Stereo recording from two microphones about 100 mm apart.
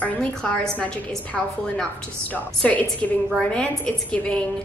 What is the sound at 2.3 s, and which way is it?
A woman's voice, 15° left (ahead or behind).